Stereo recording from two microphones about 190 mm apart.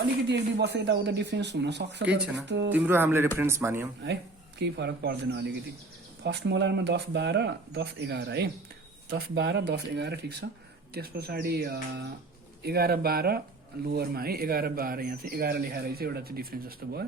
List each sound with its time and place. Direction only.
0.3 s speech: 65° right (ahead or behind)
2.0 s speech: 5° right (ahead or behind)
4.8 s speech: 60° right (ahead or behind)